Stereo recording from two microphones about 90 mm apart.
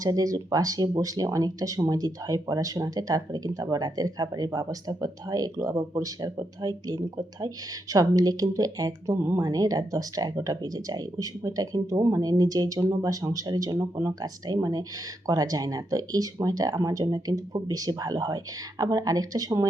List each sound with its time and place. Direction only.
0.0 s speech: 45° right (ahead or behind)